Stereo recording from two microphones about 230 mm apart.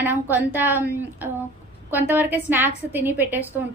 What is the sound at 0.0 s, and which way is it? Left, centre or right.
Speech, centre.